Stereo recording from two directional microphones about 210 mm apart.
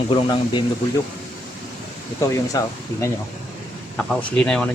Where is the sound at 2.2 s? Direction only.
15° left (ahead or behind).